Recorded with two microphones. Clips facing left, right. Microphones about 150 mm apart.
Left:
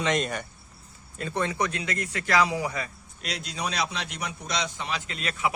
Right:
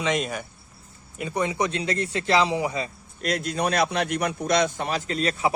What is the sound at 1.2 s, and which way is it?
Speech, 15° right (ahead or behind).